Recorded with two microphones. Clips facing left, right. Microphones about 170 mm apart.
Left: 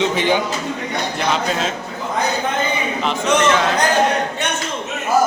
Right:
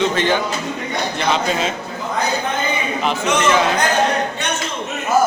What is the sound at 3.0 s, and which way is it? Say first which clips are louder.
Speech: left 2 dB; 5° right (ahead or behind).